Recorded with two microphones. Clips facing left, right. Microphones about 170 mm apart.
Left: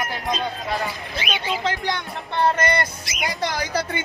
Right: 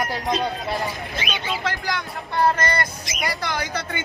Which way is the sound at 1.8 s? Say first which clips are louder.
Left 1 dB; 25° left (ahead or behind).